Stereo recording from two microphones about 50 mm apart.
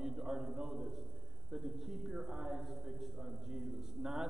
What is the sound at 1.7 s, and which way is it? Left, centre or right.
A man's voice, centre.